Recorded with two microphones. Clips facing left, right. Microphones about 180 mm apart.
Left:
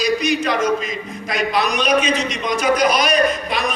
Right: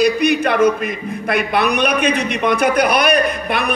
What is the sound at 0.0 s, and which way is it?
A man's voice, 60° right (ahead or behind).